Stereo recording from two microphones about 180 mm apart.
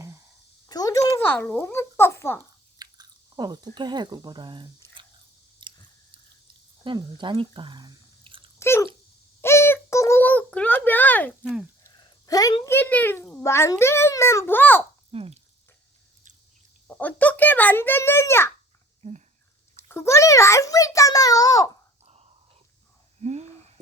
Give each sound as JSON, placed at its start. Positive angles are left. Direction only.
{"t": 0.7, "sound": "a child's voice", "side_deg": 20}
{"t": 2.7, "sound": "speech", "side_deg": -20}
{"t": 5.6, "sound": "chewing", "side_deg": -25}
{"t": 6.8, "sound": "speech", "side_deg": -25}
{"t": 8.5, "sound": "dog", "side_deg": 15}
{"t": 9.4, "sound": "a sound", "side_deg": 15}
{"t": 11.8, "sound": "a child's voice", "side_deg": 20}
{"t": 15.1, "sound": "speech", "side_deg": -35}
{"t": 16.8, "sound": "a child's voice", "side_deg": 5}
{"t": 19.9, "sound": "a child's voice", "side_deg": 15}
{"t": 22.0, "sound": "whispering", "side_deg": -35}
{"t": 23.2, "sound": "a sound", "side_deg": -35}